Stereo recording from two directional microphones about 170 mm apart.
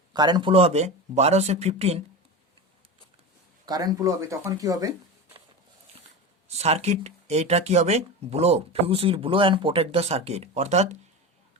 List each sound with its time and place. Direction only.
0.1 s speech: 25° right (ahead or behind)
3.7 s speech: 20° right (ahead or behind)
6.5 s speech: 40° right (ahead or behind)